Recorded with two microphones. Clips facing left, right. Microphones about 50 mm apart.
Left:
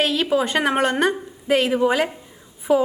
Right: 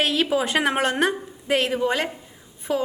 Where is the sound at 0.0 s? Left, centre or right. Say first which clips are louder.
Left 2 dB; centre.